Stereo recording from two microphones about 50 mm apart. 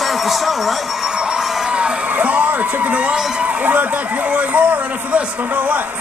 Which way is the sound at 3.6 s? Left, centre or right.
Right.